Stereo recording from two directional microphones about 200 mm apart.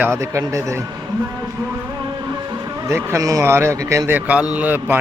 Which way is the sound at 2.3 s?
15° right (ahead or behind).